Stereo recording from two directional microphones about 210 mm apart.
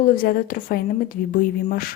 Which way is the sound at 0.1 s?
45° left (ahead or behind).